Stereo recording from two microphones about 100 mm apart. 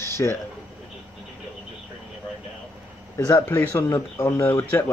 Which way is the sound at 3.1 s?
30° left (ahead or behind).